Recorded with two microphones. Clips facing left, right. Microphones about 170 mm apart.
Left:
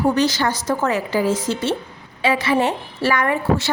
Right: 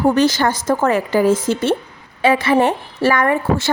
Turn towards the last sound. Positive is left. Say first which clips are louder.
# right 2 dB
turn(degrees=-50)  # may be behind; listen again after turning